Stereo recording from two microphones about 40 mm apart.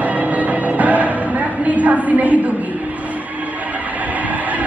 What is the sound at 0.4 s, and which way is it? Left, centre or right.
Music, right.